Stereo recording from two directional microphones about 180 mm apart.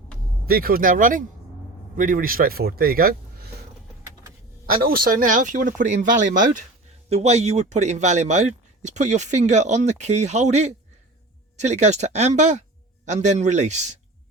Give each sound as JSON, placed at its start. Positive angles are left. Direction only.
{"t": 0.4, "sound": "speech", "side_deg": -55}
{"t": 4.7, "sound": "speech", "side_deg": -55}